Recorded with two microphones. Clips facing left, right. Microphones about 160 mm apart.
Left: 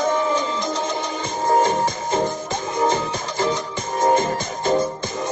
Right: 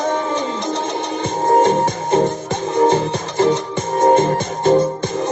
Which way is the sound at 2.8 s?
65° right (ahead or behind).